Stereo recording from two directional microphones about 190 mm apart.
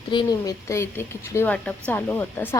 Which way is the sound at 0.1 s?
20° left (ahead or behind).